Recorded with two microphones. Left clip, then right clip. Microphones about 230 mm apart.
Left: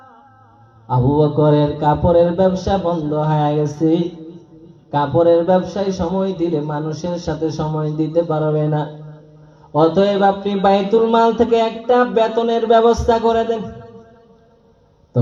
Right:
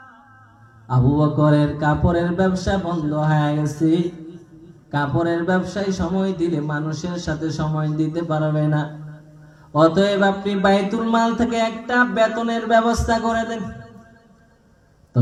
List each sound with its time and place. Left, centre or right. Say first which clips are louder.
0.9 s mantra: left 4 dB; right